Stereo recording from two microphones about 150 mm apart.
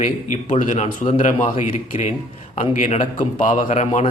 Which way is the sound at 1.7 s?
40° left (ahead or behind).